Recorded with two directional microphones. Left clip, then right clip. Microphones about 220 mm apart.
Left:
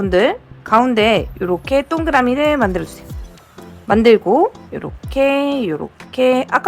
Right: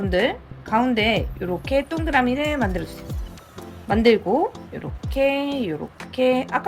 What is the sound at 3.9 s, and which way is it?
A woman's voice, 15° left (ahead or behind).